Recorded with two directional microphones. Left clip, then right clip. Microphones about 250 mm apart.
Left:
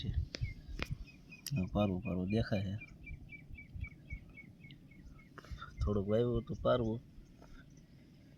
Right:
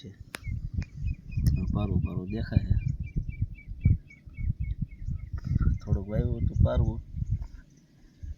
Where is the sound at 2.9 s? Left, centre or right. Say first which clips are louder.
Right 18 dB; right.